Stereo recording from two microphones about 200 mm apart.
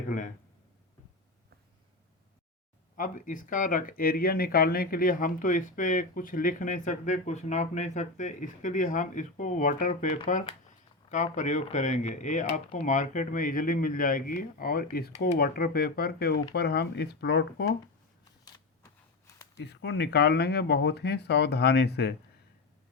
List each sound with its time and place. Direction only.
2.9 s speech: 40° left (ahead or behind)
19.5 s speech: 55° left (ahead or behind)